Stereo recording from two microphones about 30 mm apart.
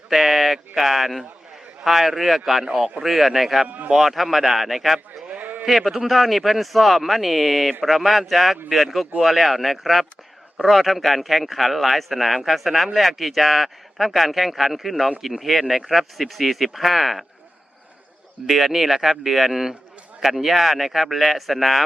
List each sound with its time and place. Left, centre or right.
0.1 s speech: centre
5.4 s a sound: right
5.6 s speech: centre
18.4 s speech: centre